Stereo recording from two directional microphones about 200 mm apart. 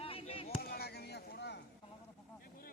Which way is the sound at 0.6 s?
50° left (ahead or behind).